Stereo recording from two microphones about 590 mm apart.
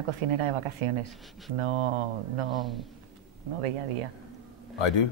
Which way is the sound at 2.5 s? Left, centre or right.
Centre.